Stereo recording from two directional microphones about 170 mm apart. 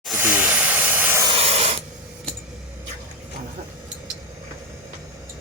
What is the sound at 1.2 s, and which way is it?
Spray, 30° right (ahead or behind).